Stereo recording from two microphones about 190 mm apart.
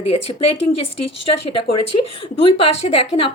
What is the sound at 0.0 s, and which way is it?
Speech, 30° left (ahead or behind).